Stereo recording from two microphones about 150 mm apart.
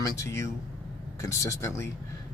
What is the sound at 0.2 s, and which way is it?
Speech, 20° left (ahead or behind).